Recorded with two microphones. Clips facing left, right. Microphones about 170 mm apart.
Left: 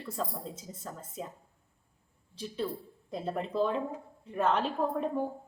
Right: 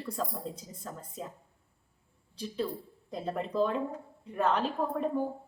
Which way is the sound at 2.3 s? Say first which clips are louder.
Right 1 dB; centre (ahead or behind).